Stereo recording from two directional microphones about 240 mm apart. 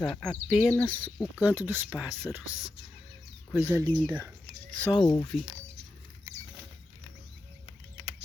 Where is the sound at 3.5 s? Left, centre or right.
Centre.